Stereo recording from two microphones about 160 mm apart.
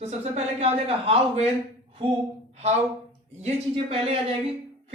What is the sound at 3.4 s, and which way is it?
Speech, 35° right (ahead or behind).